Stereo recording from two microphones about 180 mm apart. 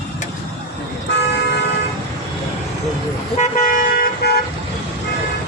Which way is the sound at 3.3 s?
40° left (ahead or behind).